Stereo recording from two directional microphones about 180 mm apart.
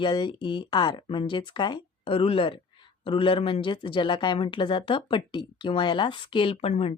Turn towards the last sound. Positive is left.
turn(degrees=35)  # may be behind; listen again after turning